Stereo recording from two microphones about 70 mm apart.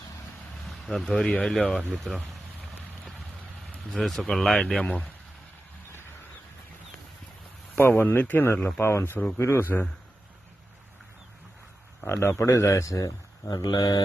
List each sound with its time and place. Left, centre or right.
0.7 s speech: centre
3.7 s speech: centre
7.8 s speech: left
12.0 s speech: left
13.5 s speech: left